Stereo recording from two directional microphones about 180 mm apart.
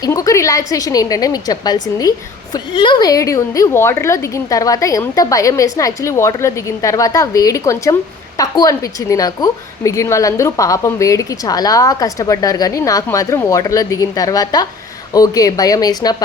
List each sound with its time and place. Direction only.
0.0 s a woman's voice: 20° left (ahead or behind)